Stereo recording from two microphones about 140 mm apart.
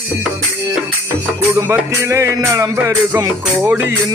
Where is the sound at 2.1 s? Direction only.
20° right (ahead or behind).